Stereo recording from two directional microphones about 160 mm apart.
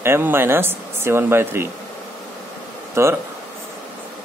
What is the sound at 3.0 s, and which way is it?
Speech, 15° right (ahead or behind).